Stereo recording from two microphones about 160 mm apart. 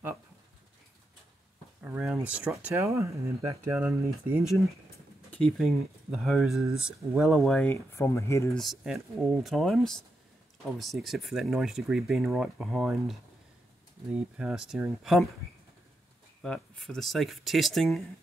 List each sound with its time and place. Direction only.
1.8 s speech: 10° right (ahead or behind)
5.6 s speech: centre (ahead or behind)
7.7 s speech: 15° left (ahead or behind)
8.5 s speech: centre (ahead or behind)
16.4 s speech: centre (ahead or behind)